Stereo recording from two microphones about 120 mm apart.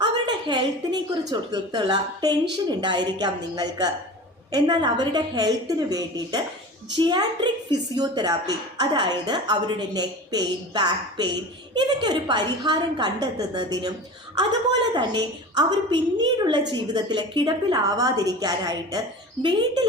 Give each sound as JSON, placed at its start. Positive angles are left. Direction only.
{"t": 0.0, "sound": "a sound", "side_deg": -40}
{"t": 1.3, "sound": "a woman's voice", "side_deg": -35}
{"t": 14.9, "sound": "a woman's voice", "side_deg": -35}